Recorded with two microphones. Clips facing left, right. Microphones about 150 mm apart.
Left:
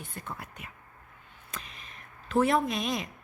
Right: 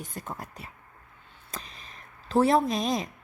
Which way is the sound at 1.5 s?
35° right (ahead or behind).